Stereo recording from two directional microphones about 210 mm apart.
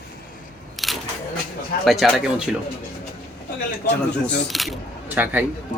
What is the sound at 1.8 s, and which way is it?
Speech, centre (ahead or behind).